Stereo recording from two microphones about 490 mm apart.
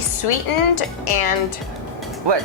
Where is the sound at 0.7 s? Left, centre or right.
Left.